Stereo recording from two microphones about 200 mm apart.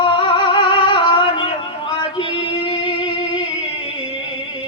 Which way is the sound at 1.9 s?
25° left (ahead or behind).